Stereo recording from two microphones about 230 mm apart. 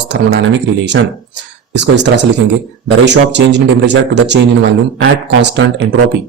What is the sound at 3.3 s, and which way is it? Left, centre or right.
Speech, right.